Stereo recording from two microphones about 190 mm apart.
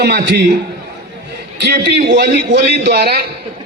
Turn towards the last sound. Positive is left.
turn(degrees=-60)  # may be behind; listen again after turning